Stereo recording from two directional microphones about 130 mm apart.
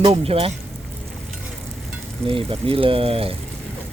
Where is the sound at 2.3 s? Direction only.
45° right (ahead or behind).